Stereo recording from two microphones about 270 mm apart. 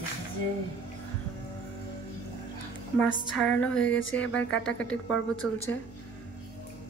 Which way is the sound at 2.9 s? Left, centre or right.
Centre.